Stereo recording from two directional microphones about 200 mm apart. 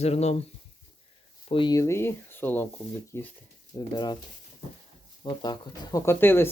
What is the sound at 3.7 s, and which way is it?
Speech, 20° left (ahead or behind).